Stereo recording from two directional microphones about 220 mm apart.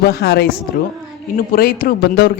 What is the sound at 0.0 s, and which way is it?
A man's voice, 45° left (ahead or behind).